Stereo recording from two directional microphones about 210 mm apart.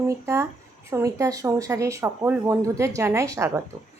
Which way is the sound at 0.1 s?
15° right (ahead or behind).